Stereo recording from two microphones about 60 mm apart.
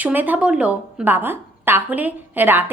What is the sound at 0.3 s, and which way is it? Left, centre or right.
Speech, centre.